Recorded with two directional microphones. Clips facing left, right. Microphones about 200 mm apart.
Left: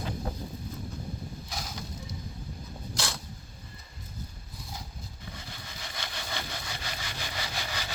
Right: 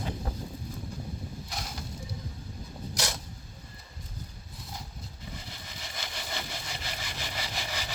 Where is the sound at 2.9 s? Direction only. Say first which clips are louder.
Right 1 dB; 20° right (ahead or behind).